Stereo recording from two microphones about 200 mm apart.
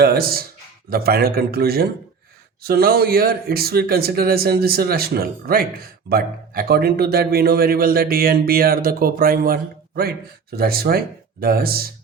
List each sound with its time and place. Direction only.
0.0 s speech: 50° right (ahead or behind)